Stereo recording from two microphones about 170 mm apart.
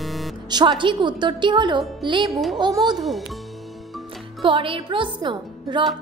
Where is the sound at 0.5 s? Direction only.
25° right (ahead or behind).